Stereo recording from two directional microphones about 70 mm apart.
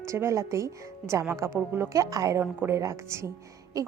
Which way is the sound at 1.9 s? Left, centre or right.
Right.